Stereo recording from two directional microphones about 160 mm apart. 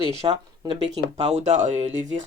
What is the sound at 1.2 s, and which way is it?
Speech, 45° right (ahead or behind).